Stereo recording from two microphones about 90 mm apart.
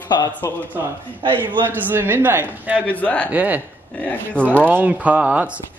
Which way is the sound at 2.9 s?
15° left (ahead or behind).